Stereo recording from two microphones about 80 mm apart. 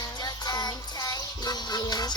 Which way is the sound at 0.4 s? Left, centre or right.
Left.